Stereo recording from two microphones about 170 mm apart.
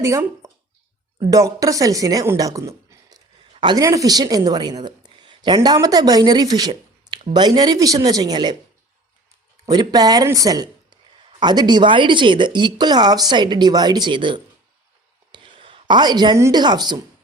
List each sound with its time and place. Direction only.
0.0 s a woman's voice: 15° right (ahead or behind)
9.6 s a woman's voice: 20° right (ahead or behind)